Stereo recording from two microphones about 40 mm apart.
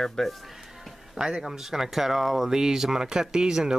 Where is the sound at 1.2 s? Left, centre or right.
Right.